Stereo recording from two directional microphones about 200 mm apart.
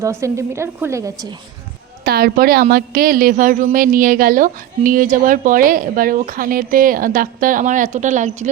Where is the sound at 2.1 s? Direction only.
50° right (ahead or behind).